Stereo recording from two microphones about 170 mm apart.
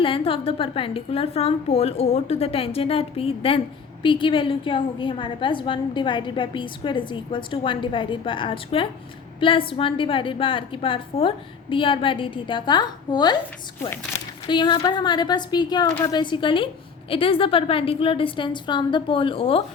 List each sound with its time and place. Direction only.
0.0 s a woman's voice: 30° left (ahead or behind)
14.4 s a woman's voice: 25° left (ahead or behind)